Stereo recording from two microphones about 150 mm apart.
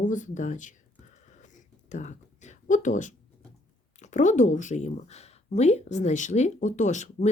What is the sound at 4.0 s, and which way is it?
Speech, 55° left (ahead or behind).